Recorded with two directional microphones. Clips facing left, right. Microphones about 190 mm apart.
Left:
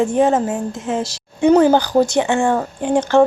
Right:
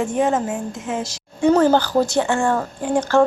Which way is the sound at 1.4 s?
15° left (ahead or behind).